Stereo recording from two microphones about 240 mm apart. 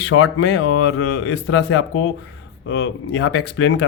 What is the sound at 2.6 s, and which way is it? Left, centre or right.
Speech, left.